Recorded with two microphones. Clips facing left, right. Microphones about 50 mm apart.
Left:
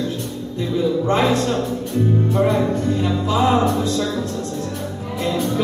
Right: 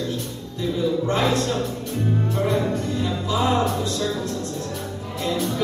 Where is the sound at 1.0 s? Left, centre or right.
Left.